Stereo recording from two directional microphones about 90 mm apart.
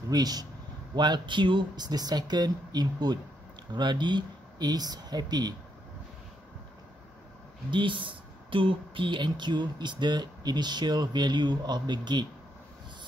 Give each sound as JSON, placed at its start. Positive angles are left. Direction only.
{"t": 0.1, "sound": "speech", "side_deg": -45}
{"t": 7.7, "sound": "speech", "side_deg": -65}